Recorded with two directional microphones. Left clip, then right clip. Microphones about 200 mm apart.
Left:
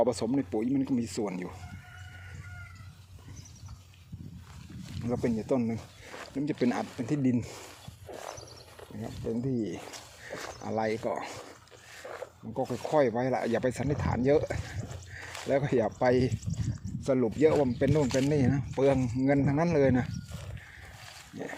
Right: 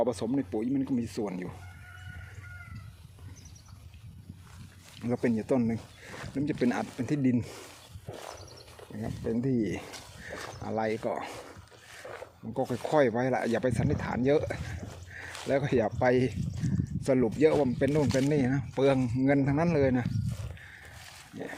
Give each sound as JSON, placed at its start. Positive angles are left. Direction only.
{"t": 0.0, "sound": "speech", "side_deg": 5}
{"t": 4.9, "sound": "speech", "side_deg": -10}
{"t": 6.1, "sound": "speech", "side_deg": -5}
{"t": 8.1, "sound": "horse", "side_deg": 5}
{"t": 9.2, "sound": "speech", "side_deg": -20}
{"t": 10.6, "sound": "speech", "side_deg": 0}
{"t": 12.4, "sound": "speech", "side_deg": -15}
{"t": 17.0, "sound": "speech", "side_deg": -20}
{"t": 17.4, "sound": "speech", "side_deg": 0}